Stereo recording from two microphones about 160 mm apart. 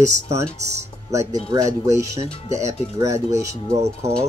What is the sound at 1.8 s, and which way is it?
Speech, 20° right (ahead or behind).